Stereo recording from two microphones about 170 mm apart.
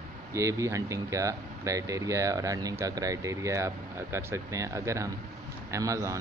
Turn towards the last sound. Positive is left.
turn(degrees=-20)  # may be behind; listen again after turning